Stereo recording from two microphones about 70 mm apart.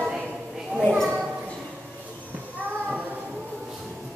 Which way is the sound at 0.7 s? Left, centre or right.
Centre.